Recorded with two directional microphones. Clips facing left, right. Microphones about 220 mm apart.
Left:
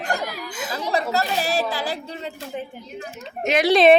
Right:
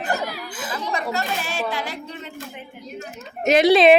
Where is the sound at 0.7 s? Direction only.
35° left (ahead or behind).